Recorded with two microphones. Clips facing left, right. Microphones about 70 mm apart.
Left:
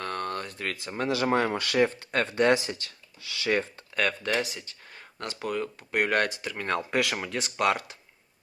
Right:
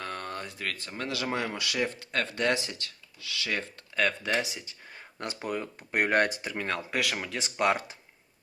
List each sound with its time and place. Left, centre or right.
0.0 s a sound: centre
0.6 s speech: centre
1.3 s speech: left
4.2 s speech: centre
5.5 s speech: centre
6.2 s speech: right
6.6 s speech: centre
7.6 s speech: centre